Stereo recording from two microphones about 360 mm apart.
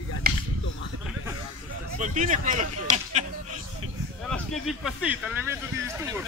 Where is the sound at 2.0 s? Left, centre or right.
Right.